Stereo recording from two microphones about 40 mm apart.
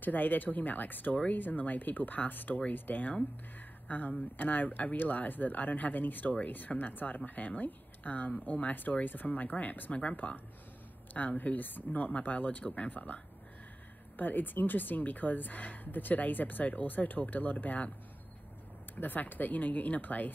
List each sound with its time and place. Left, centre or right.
0.0 s speech: left
7.2 s speech: left
18.9 s speech: left